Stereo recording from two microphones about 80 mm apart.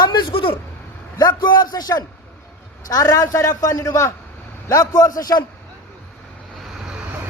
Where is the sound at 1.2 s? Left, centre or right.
Left.